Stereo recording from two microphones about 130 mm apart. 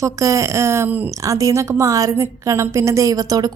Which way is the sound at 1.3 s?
25° right (ahead or behind).